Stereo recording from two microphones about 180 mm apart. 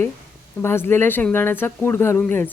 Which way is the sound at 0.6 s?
15° left (ahead or behind).